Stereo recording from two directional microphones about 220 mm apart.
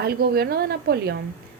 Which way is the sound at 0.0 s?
45° right (ahead or behind).